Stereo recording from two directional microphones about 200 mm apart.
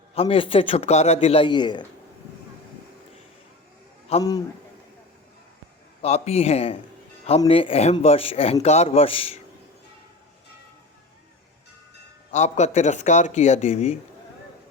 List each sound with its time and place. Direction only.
0.1 s a man's voice: 30° left (ahead or behind)
4.2 s a man's voice: 20° left (ahead or behind)
6.0 s a man's voice: 30° left (ahead or behind)
12.3 s speech: 35° left (ahead or behind)